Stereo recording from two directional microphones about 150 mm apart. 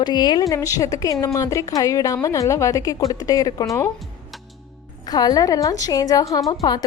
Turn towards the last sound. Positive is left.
turn(degrees=25)  # may be behind; listen again after turning